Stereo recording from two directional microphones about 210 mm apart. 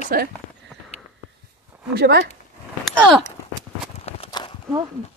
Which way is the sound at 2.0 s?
50° right (ahead or behind).